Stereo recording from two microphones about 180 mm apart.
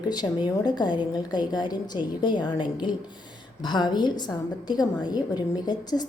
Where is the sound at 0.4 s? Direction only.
25° left (ahead or behind).